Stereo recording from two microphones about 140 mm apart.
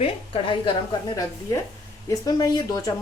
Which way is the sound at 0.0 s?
35° left (ahead or behind).